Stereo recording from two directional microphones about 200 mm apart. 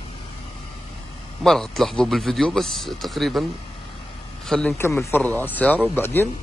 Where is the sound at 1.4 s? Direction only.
Centre (ahead or behind).